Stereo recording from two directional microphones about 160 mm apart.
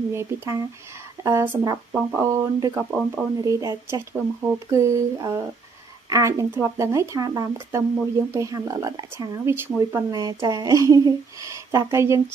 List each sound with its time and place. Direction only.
0.1 s speech: 20° right (ahead or behind)
2.8 s speech: 5° right (ahead or behind)
3.4 s speech: 20° right (ahead or behind)
10.1 s speech: 25° right (ahead or behind)